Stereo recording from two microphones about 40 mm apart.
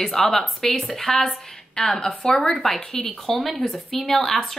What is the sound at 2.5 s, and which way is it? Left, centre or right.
Speech, centre.